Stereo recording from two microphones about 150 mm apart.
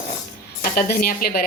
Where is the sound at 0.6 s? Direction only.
70° left (ahead or behind).